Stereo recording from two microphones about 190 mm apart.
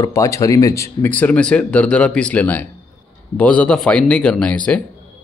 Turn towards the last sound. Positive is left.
turn(degrees=5)  # may be behind; listen again after turning